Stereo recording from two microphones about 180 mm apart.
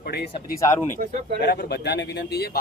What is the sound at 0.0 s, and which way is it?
Speech, 60° left (ahead or behind).